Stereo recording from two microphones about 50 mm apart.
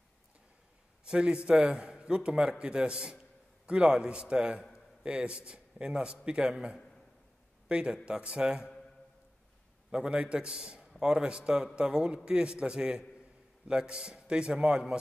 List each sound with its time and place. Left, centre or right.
1.0 s a man's voice: centre
9.8 s a man's voice: centre